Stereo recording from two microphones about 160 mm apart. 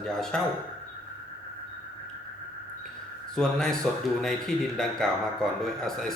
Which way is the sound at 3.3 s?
5° left (ahead or behind).